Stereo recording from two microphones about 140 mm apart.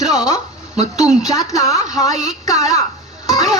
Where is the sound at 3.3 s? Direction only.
25° left (ahead or behind).